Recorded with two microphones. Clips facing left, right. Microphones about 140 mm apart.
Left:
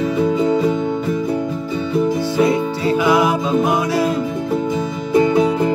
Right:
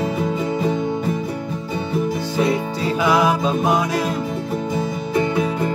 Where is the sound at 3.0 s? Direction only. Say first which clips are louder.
Left 1 dB; 25° left (ahead or behind).